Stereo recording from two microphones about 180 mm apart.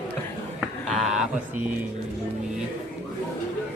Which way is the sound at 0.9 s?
5° right (ahead or behind).